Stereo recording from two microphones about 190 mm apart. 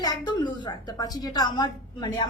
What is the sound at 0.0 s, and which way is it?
A woman's voice, 20° left (ahead or behind).